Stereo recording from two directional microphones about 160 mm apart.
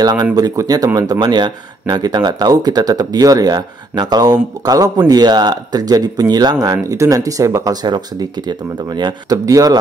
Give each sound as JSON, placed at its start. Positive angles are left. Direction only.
{"t": 0.0, "sound": "speech", "side_deg": -25}